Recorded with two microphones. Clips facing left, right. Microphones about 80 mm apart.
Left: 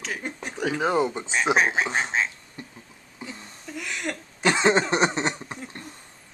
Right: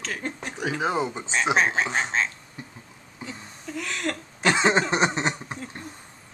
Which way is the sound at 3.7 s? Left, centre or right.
Centre.